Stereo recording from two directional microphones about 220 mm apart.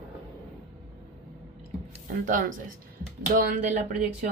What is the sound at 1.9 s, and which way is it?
A woman's voice, 35° right (ahead or behind).